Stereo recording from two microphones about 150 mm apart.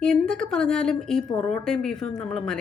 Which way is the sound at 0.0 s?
5° left (ahead or behind).